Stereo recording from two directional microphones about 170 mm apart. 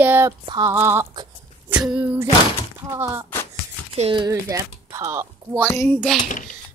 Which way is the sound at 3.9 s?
35° right (ahead or behind).